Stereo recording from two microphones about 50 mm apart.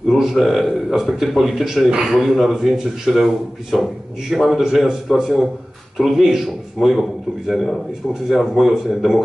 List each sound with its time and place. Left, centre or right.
0.2 s a man's voice: centre
1.9 s speech: right
2.1 s a man's voice: centre